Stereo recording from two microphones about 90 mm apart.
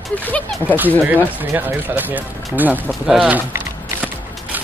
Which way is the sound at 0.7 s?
20° right (ahead or behind).